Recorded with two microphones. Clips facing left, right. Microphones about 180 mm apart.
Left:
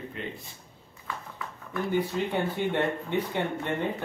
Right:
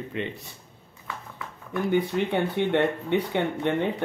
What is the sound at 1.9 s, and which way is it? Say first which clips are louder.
Speech: right 4 dB; 65° right (ahead or behind).